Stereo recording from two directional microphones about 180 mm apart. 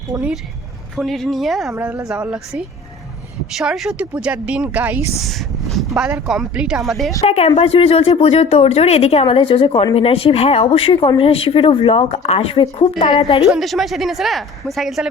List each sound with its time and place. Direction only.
0.1 s speech: 20° right (ahead or behind)
0.9 s a woman's voice: centre (ahead or behind)
1.7 s speech: 10° right (ahead or behind)
5.3 s a sound: centre (ahead or behind)
6.0 s a woman's voice: 5° right (ahead or behind)
7.3 s speech: 35° left (ahead or behind)
13.4 s a woman's voice: centre (ahead or behind)